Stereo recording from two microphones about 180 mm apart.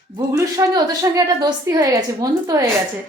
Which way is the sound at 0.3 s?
20° right (ahead or behind).